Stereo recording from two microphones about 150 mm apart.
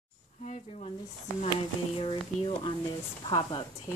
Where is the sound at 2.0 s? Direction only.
35° left (ahead or behind).